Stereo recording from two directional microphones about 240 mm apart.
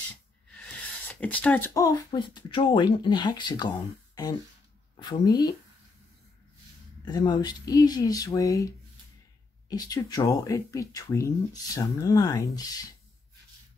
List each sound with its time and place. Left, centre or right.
1.0 s speech: centre
7.1 s speech: centre